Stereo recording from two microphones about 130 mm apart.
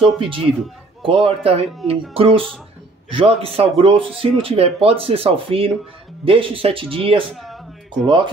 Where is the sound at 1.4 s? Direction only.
50° right (ahead or behind).